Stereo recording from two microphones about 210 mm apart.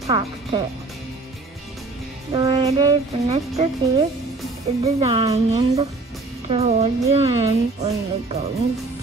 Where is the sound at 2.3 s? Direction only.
25° right (ahead or behind).